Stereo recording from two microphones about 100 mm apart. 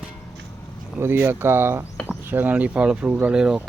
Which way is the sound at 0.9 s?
25° right (ahead or behind).